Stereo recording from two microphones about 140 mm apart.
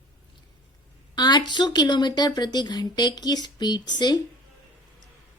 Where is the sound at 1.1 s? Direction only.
30° left (ahead or behind).